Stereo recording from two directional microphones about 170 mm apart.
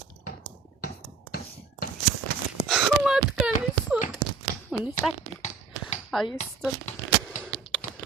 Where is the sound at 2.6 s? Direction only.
Centre (ahead or behind).